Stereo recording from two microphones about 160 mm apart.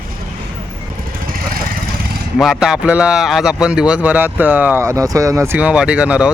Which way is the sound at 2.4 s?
Centre (ahead or behind).